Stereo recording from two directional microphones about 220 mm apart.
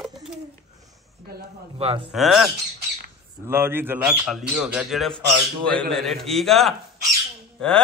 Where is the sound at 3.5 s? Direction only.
10° right (ahead or behind).